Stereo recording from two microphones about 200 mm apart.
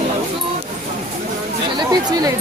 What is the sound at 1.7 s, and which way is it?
Speech, 20° right (ahead or behind).